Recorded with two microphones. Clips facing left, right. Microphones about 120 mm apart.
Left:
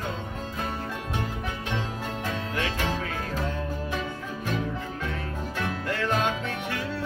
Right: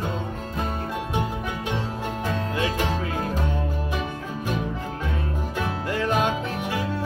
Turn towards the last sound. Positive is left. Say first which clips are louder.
# right 4 dB
turn(degrees=-15)  # may be behind; listen again after turning